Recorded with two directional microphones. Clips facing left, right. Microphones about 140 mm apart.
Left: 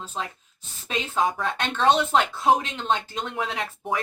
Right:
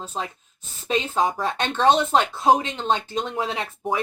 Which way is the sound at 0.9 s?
20° right (ahead or behind).